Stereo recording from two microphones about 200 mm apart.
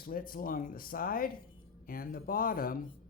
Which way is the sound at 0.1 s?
45° left (ahead or behind).